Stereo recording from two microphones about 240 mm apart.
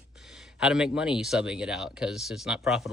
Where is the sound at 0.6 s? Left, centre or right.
Centre.